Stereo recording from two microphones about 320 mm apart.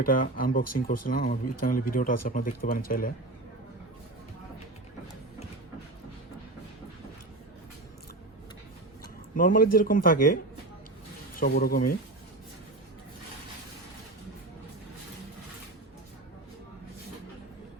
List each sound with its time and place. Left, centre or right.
0.0 s speech: left
9.3 s speech: left